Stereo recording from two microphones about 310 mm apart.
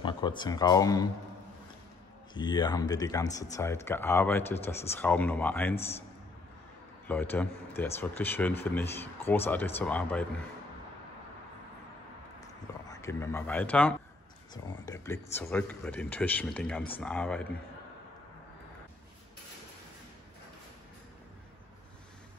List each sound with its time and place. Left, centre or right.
0.0 s speech: centre
2.3 s speech: centre
5.8 s a man's voice: centre
7.1 s speech: centre
12.8 s speech: centre